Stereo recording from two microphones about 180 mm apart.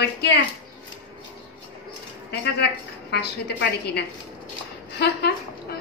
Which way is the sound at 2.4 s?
65° left (ahead or behind).